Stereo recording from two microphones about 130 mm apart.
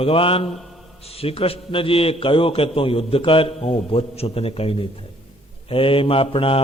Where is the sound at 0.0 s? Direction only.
45° left (ahead or behind).